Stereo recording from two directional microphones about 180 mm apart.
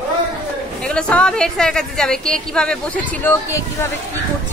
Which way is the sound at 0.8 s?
5° left (ahead or behind).